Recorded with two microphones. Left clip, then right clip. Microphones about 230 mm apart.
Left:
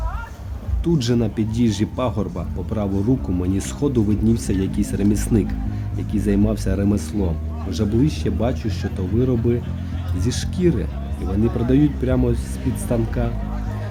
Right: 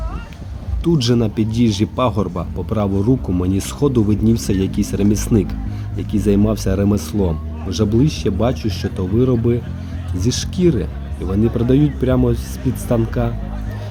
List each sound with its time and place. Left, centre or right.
0.9 s speech: centre